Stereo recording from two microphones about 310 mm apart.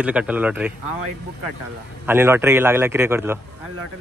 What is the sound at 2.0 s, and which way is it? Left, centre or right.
A man's voice, centre.